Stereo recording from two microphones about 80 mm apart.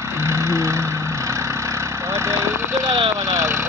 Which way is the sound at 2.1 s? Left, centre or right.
Right.